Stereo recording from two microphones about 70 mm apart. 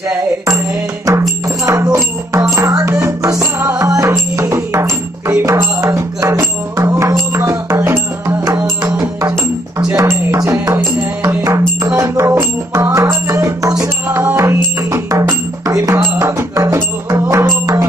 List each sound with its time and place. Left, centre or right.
1.0 s music: right
10.0 s music: right
14.0 s music: right